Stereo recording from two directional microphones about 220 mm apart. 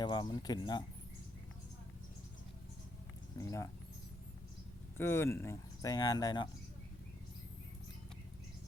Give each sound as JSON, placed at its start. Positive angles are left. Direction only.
{"t": 0.0, "sound": "speech", "side_deg": 20}
{"t": 3.3, "sound": "speech", "side_deg": 15}
{"t": 4.9, "sound": "speech", "side_deg": 10}